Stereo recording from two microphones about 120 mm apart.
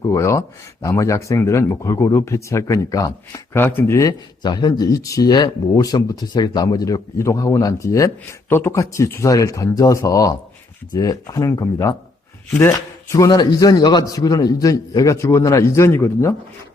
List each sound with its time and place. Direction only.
0.0 s speech: 25° left (ahead or behind)
4.4 s speech: 35° left (ahead or behind)